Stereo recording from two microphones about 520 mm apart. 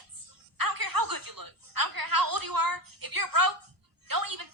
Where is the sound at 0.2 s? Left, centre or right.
Right.